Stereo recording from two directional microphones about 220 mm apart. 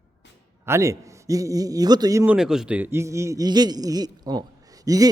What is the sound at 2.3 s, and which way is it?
Speech, 5° right (ahead or behind).